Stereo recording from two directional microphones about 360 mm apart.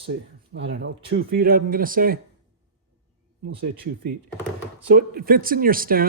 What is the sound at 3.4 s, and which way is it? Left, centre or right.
Speech, right.